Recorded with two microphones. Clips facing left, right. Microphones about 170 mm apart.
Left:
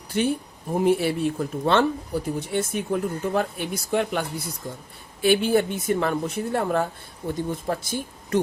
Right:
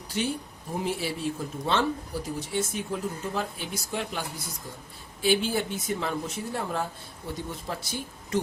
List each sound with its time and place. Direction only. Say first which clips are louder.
0.1 s speech: left 6 dB; 55° left (ahead or behind)